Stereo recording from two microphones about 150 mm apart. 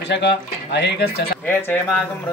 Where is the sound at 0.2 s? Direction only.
90° left.